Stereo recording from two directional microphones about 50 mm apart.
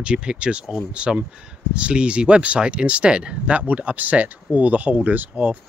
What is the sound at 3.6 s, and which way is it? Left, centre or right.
Speech, right.